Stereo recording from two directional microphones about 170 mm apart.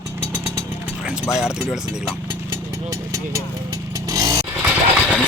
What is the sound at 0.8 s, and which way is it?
Speech, 5° right (ahead or behind).